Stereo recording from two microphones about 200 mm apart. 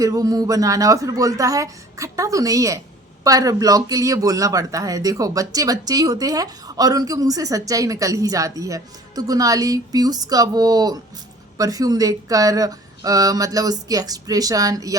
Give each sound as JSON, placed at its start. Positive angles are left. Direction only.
{"t": 0.0, "sound": "speech", "side_deg": -15}